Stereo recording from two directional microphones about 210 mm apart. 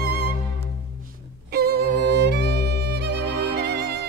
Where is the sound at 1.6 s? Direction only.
50° right (ahead or behind).